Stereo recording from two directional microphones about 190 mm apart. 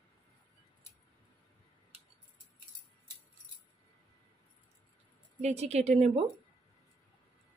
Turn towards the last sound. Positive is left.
turn(degrees=-35)  # may be behind; listen again after turning